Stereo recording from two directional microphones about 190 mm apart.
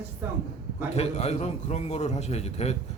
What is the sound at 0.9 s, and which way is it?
A man's voice, 35° left (ahead or behind).